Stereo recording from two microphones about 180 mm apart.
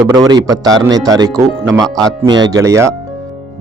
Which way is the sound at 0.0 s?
20° right (ahead or behind).